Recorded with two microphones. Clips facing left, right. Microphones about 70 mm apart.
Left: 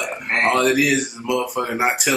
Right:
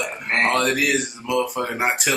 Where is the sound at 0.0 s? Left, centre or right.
Centre.